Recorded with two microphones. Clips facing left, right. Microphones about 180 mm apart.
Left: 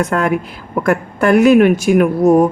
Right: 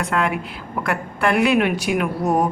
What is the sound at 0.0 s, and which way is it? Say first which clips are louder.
Speech: left 6 dB; 45° left (ahead or behind).